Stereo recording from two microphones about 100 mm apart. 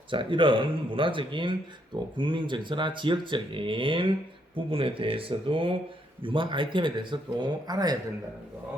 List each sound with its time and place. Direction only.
0.1 s speech: 55° right (ahead or behind)